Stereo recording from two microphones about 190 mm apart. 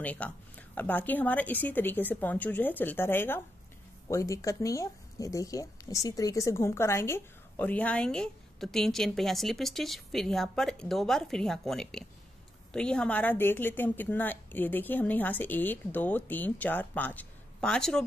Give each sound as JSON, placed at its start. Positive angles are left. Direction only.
{"t": 0.0, "sound": "speech", "side_deg": 10}